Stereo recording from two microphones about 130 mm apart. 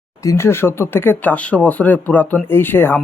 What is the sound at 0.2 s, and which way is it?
Speech, 20° left (ahead or behind).